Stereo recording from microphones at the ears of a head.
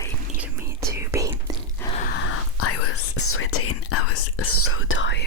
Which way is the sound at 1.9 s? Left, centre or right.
Left.